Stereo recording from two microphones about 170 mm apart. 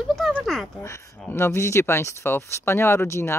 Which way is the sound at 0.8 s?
15° left (ahead or behind).